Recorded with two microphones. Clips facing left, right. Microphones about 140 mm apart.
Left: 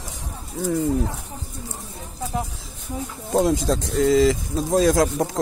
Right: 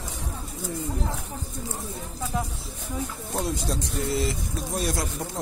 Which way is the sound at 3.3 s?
90° left.